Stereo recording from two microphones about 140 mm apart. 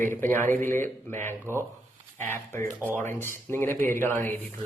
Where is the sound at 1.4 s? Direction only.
20° right (ahead or behind).